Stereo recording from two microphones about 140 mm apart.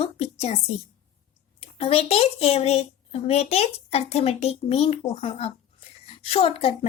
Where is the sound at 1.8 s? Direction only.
45° left (ahead or behind).